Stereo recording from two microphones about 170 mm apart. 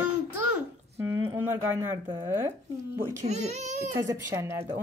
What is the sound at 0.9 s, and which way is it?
A woman's voice, 15° right (ahead or behind).